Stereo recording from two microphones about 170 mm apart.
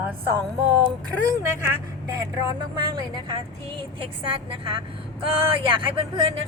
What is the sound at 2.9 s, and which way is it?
A woman's voice, 25° right (ahead or behind).